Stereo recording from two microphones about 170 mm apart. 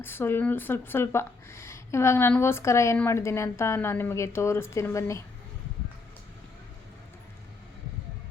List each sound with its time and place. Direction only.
0.0 s speech: 15° left (ahead or behind)